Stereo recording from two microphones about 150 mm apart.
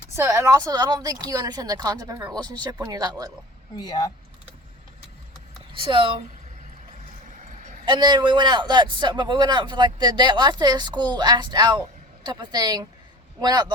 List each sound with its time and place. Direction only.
0.2 s a man's voice: 20° right (ahead or behind)
3.8 s speech: 25° left (ahead or behind)
5.7 s speech: 35° right (ahead or behind)
7.9 s a man's voice: 30° right (ahead or behind)